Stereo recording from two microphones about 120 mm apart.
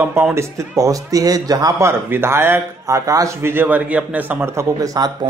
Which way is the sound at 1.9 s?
20° right (ahead or behind).